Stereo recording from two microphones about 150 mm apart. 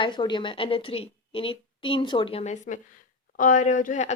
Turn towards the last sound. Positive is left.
turn(degrees=60)  # may be behind; listen again after turning